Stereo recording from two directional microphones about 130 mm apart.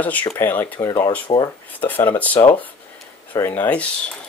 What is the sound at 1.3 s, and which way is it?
Speech, 35° left (ahead or behind).